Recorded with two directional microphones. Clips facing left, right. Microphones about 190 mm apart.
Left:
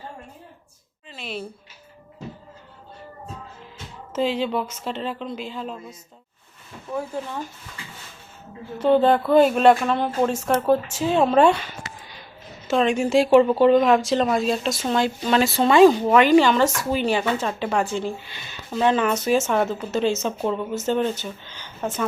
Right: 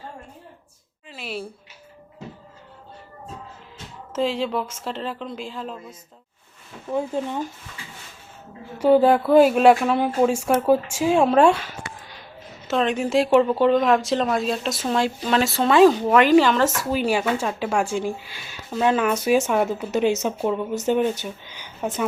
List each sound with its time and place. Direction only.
1.1 s a sound: 5° right (ahead or behind)
4.1 s speech: centre (ahead or behind)
6.9 s speech: 20° right (ahead or behind)
8.8 s speech: 5° right (ahead or behind)